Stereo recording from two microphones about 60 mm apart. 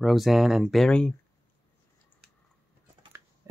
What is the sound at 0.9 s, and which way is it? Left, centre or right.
Speech, centre.